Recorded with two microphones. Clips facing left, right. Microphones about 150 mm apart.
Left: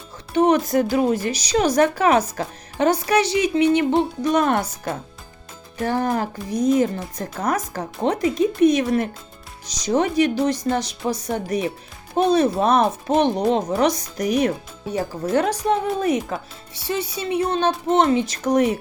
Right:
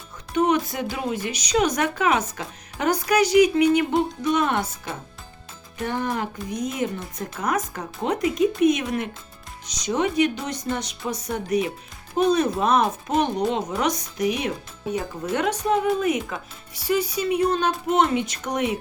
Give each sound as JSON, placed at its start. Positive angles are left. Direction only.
{"t": 0.3, "sound": "speech", "side_deg": 35}
{"t": 5.8, "sound": "speech", "side_deg": 35}